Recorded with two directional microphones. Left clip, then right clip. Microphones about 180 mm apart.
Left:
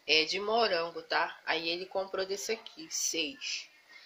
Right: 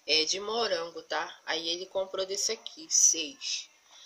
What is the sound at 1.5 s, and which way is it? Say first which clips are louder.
Speech: right 3 dB; 40° right (ahead or behind).